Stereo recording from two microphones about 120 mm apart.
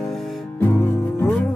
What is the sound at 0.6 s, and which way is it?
Music, 20° left (ahead or behind).